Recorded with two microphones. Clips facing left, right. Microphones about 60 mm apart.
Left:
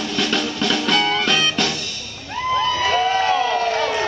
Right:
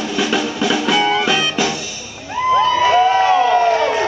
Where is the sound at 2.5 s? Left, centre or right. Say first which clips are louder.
Right 6 dB; centre.